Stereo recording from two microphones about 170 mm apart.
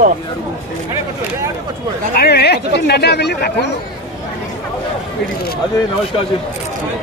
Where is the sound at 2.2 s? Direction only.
70° left (ahead or behind).